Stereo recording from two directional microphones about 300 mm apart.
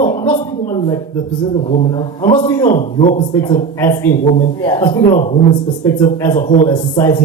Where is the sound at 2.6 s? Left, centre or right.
Left.